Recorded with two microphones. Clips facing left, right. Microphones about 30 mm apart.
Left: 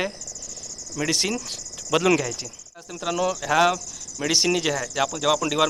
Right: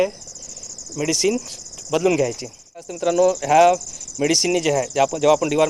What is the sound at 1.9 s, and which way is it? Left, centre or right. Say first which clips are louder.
Speech: right 1 dB; left.